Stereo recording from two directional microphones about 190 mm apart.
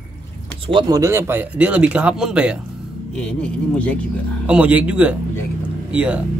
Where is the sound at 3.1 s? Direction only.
5° left (ahead or behind).